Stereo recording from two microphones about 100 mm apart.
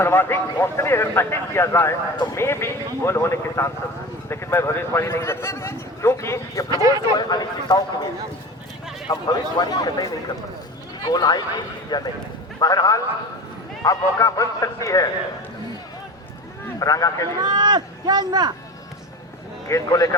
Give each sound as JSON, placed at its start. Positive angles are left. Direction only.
{"t": 0.0, "sound": "a man's voice", "side_deg": 20}
{"t": 6.7, "sound": "speech", "side_deg": -40}
{"t": 7.2, "sound": "speech", "side_deg": 45}
{"t": 9.0, "sound": "a man's voice", "side_deg": 45}
{"t": 16.8, "sound": "a man's voice", "side_deg": 35}
{"t": 17.4, "sound": "speech", "side_deg": -45}
{"t": 19.6, "sound": "a man's voice", "side_deg": 35}